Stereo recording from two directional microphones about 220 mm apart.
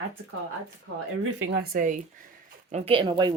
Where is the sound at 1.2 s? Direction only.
60° right (ahead or behind).